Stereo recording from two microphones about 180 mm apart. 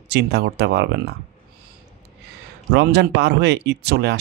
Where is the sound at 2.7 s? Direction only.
70° right (ahead or behind).